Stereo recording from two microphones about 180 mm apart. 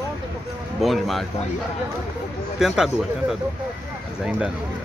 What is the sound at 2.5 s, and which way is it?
Speech, 5° right (ahead or behind).